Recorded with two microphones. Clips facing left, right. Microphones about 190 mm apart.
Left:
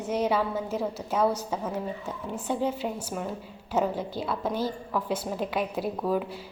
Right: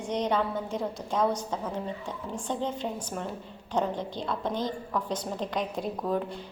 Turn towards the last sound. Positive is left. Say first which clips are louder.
# left 2 dB
turn(degrees=5)  # may be behind; listen again after turning